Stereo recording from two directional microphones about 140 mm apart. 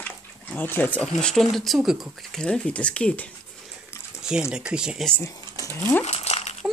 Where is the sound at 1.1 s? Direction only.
5° left (ahead or behind).